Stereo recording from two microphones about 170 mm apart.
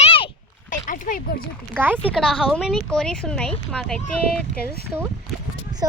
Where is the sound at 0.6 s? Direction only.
50° left (ahead or behind).